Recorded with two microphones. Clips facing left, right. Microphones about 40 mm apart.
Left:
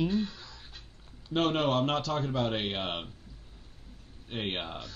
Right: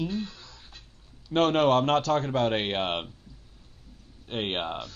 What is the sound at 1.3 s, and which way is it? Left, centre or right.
A man's voice, right.